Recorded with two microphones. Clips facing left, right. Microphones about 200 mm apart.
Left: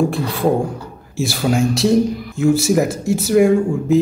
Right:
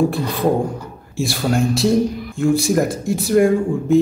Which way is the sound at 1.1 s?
Centre (ahead or behind).